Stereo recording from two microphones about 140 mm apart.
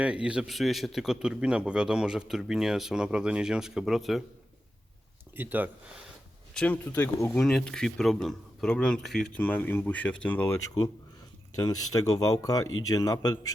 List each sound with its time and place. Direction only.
0.0 s a man's voice: 10° right (ahead or behind)
5.4 s speech: 10° right (ahead or behind)
6.5 s speech: 5° left (ahead or behind)
7.4 s a man's voice: 5° left (ahead or behind)
11.5 s speech: 25° left (ahead or behind)